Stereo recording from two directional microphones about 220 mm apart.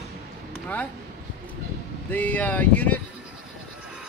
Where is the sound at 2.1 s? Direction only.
5° left (ahead or behind).